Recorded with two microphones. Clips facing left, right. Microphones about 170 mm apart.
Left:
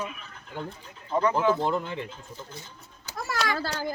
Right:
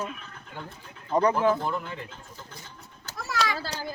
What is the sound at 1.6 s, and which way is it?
Speech, 25° left (ahead or behind).